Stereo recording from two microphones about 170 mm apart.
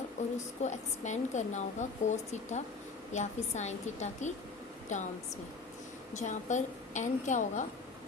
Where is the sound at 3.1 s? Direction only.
45° left (ahead or behind).